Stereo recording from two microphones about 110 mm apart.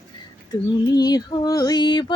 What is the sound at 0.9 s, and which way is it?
Female singing, 35° left (ahead or behind).